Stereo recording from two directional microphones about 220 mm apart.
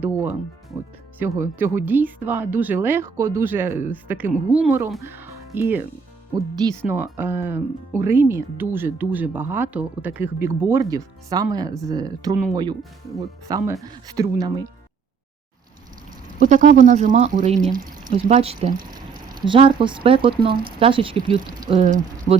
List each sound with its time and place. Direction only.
0.0 s speech: 10° right (ahead or behind)
6.8 s speech: 10° right (ahead or behind)
13.5 s speech: 15° right (ahead or behind)
16.4 s speech: 35° right (ahead or behind)
18.3 s speech: 25° right (ahead or behind)
21.8 s speech: 35° right (ahead or behind)